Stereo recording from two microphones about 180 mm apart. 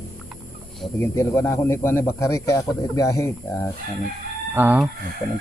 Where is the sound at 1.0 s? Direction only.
15° left (ahead or behind).